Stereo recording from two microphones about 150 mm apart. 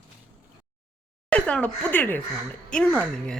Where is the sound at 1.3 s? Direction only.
10° left (ahead or behind).